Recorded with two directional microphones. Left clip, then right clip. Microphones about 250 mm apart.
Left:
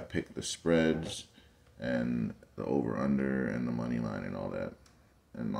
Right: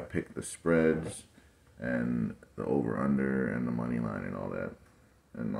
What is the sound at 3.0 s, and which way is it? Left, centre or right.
Speech, centre.